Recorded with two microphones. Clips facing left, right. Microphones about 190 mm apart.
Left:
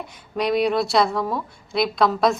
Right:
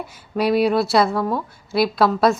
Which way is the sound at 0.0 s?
5° right (ahead or behind).